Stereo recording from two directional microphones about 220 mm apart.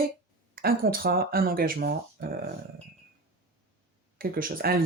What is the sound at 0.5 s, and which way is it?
Speech, 40° right (ahead or behind).